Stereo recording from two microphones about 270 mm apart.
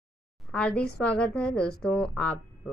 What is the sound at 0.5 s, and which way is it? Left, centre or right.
A woman's voice, centre.